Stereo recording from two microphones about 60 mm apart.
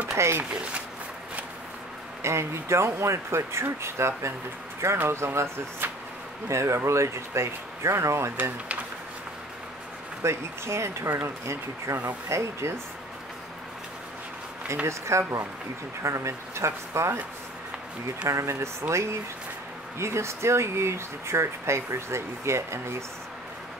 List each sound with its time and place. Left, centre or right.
0.1 s speech: right
0.5 s speech: right
2.2 s speech: right
10.2 s speech: right
14.9 s speech: right
18.3 s speech: right